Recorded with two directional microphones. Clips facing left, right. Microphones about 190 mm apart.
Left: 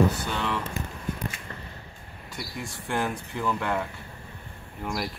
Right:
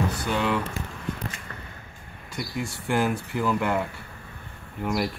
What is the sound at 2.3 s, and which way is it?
Speech, centre (ahead or behind).